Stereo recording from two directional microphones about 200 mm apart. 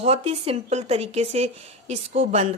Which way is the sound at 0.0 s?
30° right (ahead or behind).